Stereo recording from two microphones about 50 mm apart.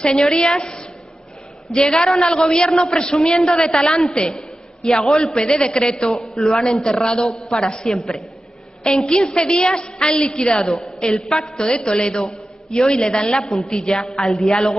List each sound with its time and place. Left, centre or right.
0.2 s a man's voice: centre
5.5 s a man's voice: centre
10.0 s a woman's voice: left
10.3 s a man's voice: centre
11.2 s a woman's voice: centre
11.5 s a man's voice: centre
13.5 s a woman's voice: centre
13.7 s a man's voice: centre